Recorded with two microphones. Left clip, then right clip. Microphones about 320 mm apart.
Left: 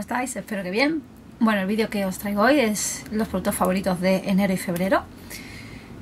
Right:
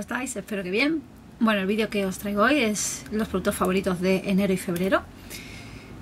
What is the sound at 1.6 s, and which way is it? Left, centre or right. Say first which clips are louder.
Speech: left 1 dB; centre.